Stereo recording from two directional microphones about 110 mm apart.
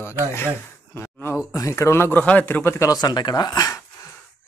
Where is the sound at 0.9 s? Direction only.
25° left (ahead or behind).